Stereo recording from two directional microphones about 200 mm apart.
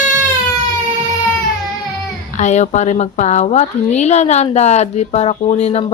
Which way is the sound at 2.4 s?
35° left (ahead or behind).